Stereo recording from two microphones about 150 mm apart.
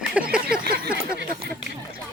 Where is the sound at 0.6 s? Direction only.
90° right.